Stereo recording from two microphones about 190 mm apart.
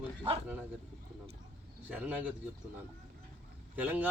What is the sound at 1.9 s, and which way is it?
Speech, 5° right (ahead or behind).